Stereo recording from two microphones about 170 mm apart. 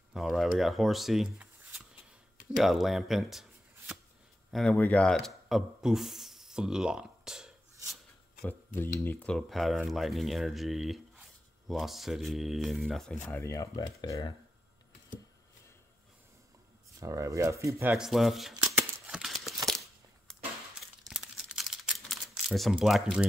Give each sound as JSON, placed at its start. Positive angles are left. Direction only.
{"t": 0.1, "sound": "speech", "side_deg": 0}
{"t": 2.5, "sound": "speech", "side_deg": 0}
{"t": 7.8, "sound": "a sound", "side_deg": 0}
{"t": 8.5, "sound": "speech", "side_deg": 15}
{"t": 13.3, "sound": "speech", "side_deg": 15}
{"t": 17.0, "sound": "speech", "side_deg": -20}
{"t": 17.9, "sound": "speech", "side_deg": 0}
{"t": 19.0, "sound": "a sound", "side_deg": 0}
{"t": 21.1, "sound": "camera", "side_deg": -5}